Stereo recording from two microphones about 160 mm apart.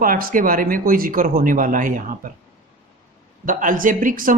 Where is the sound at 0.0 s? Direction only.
60° right (ahead or behind).